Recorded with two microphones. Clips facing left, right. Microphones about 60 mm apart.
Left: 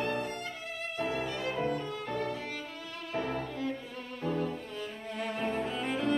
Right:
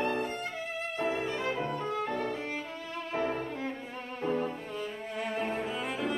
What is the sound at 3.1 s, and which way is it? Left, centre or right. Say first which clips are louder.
Music: right 1 dB; right.